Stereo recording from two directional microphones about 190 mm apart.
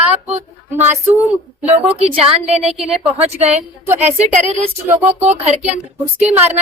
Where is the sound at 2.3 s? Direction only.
30° right (ahead or behind).